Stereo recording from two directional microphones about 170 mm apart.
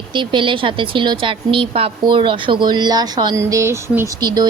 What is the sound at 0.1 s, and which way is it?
A woman's voice, 30° right (ahead or behind).